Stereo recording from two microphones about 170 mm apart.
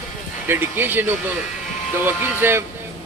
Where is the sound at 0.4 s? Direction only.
10° right (ahead or behind).